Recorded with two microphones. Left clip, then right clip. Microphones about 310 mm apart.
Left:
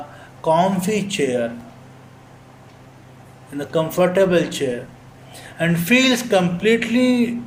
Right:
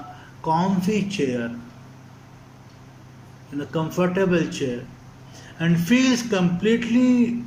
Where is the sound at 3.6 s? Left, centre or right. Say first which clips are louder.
Left 7 dB; left.